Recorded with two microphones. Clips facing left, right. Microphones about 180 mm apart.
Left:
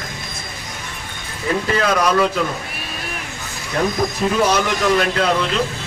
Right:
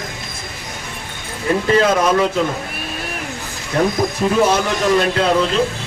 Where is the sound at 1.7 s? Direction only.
25° right (ahead or behind).